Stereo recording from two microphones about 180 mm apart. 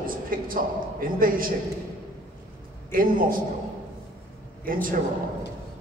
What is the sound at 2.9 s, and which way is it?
Speech, 50° right (ahead or behind).